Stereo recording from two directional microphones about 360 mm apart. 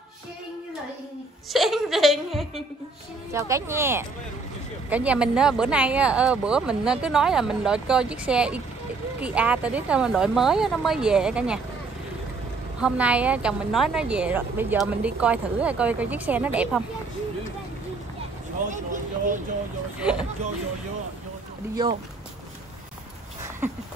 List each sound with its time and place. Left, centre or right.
1.5 s a woman's voice: centre
12.8 s a woman's voice: centre
18.7 s speech: right
20.0 s a woman's voice: centre